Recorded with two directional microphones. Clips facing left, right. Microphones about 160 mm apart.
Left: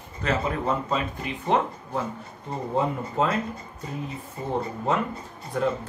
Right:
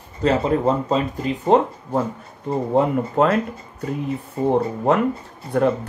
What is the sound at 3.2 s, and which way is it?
Speech, 65° right (ahead or behind).